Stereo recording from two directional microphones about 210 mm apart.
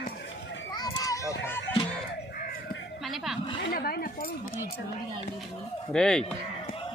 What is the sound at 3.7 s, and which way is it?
Speech, 45° left (ahead or behind).